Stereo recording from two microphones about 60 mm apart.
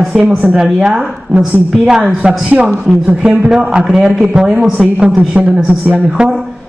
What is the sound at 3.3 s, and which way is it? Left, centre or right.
Speech, centre.